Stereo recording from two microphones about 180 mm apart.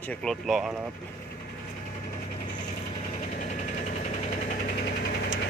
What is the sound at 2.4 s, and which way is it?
Vehicle, 45° left (ahead or behind).